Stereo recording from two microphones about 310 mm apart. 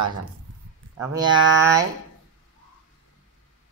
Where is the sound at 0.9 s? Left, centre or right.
Centre.